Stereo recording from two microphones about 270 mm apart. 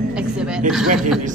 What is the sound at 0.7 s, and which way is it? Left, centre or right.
Speech, centre.